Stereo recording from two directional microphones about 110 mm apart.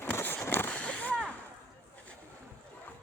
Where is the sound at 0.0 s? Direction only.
20° left (ahead or behind).